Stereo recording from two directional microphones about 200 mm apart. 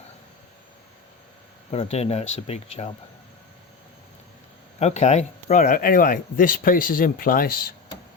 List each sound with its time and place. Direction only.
1.7 s speech: 30° left (ahead or behind)
4.8 s speech: 35° left (ahead or behind)